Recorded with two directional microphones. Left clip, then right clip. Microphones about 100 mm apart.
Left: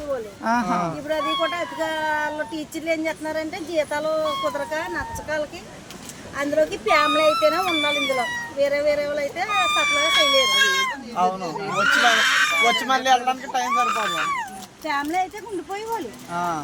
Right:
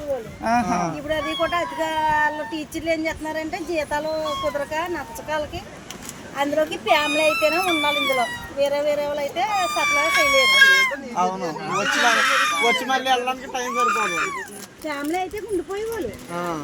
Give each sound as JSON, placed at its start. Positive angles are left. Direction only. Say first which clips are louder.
{"t": 0.4, "sound": "speech", "louder": "right 1 dB", "side_deg": 20}
{"t": 13.1, "sound": "speech", "louder": "left 2 dB", "side_deg": 35}